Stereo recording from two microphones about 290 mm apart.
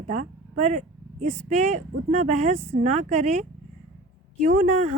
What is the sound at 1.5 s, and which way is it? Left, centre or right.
Speech, right.